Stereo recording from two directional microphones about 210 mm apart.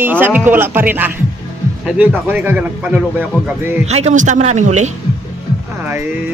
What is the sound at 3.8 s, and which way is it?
A man's voice, 30° right (ahead or behind).